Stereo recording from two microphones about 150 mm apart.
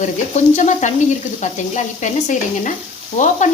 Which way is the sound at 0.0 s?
50° left (ahead or behind).